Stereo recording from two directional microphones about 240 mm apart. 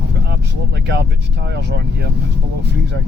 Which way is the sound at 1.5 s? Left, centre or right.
Right.